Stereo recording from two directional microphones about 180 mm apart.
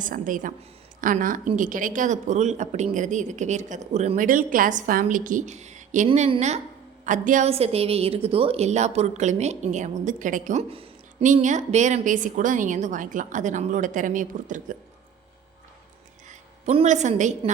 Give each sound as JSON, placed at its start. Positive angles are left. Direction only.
{"t": 0.0, "sound": "a woman's voice", "side_deg": -45}
{"t": 11.2, "sound": "a woman's voice", "side_deg": -45}
{"t": 16.6, "sound": "a woman's voice", "side_deg": -40}